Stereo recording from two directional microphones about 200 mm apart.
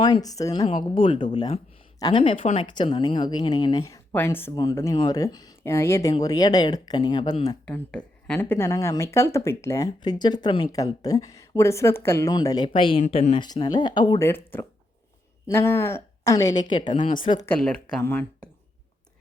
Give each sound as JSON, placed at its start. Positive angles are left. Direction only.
{"t": 0.0, "sound": "speech", "side_deg": 20}
{"t": 0.6, "sound": "speech", "side_deg": 30}
{"t": 7.6, "sound": "speech", "side_deg": 5}
{"t": 14.3, "sound": "speech", "side_deg": 10}
{"t": 17.4, "sound": "speech", "side_deg": 5}